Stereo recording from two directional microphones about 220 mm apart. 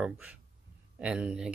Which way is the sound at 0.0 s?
5° right (ahead or behind).